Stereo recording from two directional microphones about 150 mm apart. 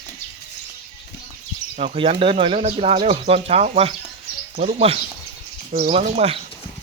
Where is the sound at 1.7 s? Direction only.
45° right (ahead or behind).